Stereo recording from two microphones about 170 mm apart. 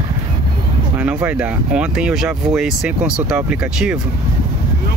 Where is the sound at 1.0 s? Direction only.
5° right (ahead or behind).